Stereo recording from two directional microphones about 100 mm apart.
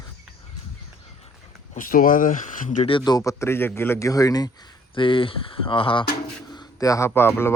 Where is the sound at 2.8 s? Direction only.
55° left (ahead or behind).